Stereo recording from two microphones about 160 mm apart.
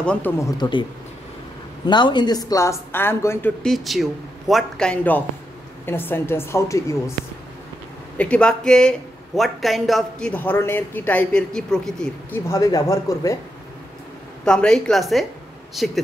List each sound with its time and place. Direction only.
0.0 s a woman's voice: 5° left (ahead or behind)
0.4 s a woman's voice: 25° left (ahead or behind)
1.9 s a woman's voice: 30° left (ahead or behind)
3.6 s a woman's voice: centre (ahead or behind); by 7.0 s 20° left (ahead or behind)
8.2 s speech: 5° left (ahead or behind)
12.4 s a woman's voice: 20° left (ahead or behind)
14.4 s speech: 5° left (ahead or behind)